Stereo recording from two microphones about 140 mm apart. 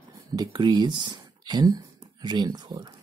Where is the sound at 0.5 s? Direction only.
30° right (ahead or behind).